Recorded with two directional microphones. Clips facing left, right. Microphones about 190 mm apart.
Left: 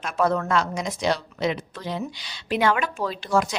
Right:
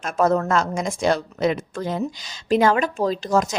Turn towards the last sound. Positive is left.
turn(degrees=-40)  # may be behind; listen again after turning